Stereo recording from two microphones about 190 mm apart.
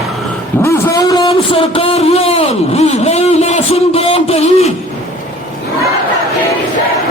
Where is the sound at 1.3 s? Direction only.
30° left (ahead or behind).